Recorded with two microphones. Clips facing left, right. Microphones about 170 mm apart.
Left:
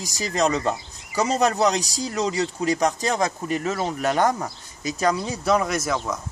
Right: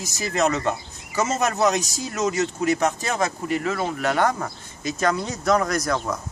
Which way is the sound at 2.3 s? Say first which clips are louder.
Right 1 dB; 35° left (ahead or behind).